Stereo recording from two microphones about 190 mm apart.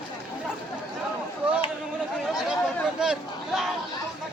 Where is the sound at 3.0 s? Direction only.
5° right (ahead or behind).